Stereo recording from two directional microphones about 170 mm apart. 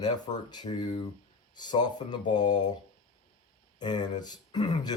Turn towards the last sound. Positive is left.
turn(degrees=25)  # may be behind; listen again after turning